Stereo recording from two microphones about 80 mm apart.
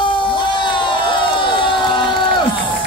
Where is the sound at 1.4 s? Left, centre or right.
Left.